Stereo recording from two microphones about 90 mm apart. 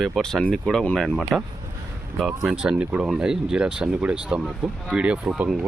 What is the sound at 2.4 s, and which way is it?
Speech, 5° right (ahead or behind).